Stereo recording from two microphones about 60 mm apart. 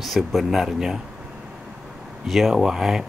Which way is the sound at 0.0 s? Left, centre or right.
Centre.